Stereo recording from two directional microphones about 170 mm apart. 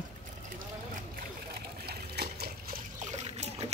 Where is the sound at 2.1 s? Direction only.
70° right (ahead or behind).